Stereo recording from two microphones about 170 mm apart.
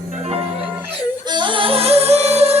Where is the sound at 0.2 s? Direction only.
35° right (ahead or behind).